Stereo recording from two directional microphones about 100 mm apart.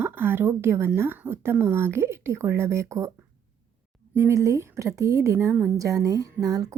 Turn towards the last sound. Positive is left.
turn(degrees=-40)  # may be behind; listen again after turning